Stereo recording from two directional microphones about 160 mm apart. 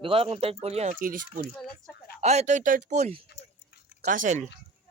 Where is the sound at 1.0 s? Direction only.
60° right (ahead or behind).